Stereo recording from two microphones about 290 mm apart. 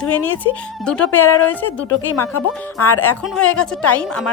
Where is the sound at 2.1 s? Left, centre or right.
Left.